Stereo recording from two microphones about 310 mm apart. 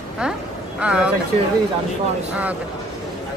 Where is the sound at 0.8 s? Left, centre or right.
Centre.